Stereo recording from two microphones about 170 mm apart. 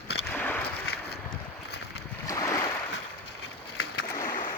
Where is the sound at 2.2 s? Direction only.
20° left (ahead or behind).